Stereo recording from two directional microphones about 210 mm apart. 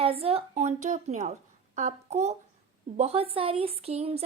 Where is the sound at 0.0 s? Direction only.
25° right (ahead or behind).